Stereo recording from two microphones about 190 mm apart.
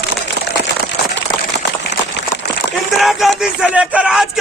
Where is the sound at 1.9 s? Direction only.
65° left (ahead or behind).